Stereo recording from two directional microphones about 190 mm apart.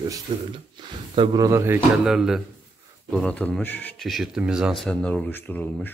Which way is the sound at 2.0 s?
5° right (ahead or behind).